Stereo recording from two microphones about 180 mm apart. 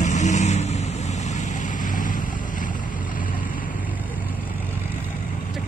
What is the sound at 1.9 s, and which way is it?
Vehicle, 50° left (ahead or behind).